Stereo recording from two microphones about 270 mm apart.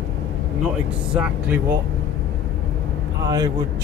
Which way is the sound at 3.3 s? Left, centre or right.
Centre.